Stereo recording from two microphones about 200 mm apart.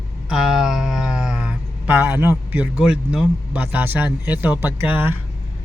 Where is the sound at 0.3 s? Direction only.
Centre (ahead or behind).